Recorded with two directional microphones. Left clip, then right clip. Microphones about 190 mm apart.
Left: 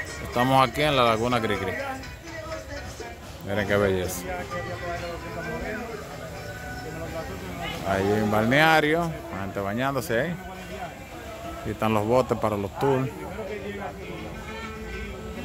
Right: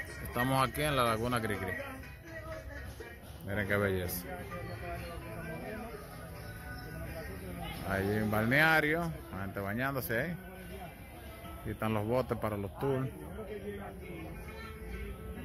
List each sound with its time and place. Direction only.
0.3 s speech: 10° left (ahead or behind)
3.4 s speech: 10° left (ahead or behind)
7.9 s speech: 5° left (ahead or behind)
11.8 s speech: 10° left (ahead or behind)